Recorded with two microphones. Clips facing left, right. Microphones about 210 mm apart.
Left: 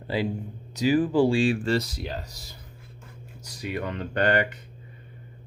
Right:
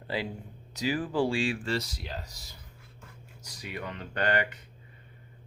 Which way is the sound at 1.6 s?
40° left (ahead or behind).